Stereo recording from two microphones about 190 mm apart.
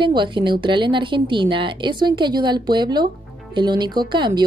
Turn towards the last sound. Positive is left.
turn(degrees=-25)  # may be behind; listen again after turning